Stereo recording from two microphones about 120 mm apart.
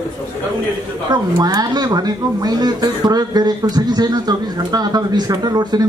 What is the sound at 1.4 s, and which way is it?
A man's voice, 35° right (ahead or behind).